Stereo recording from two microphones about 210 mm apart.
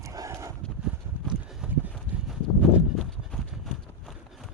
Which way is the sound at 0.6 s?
5° right (ahead or behind).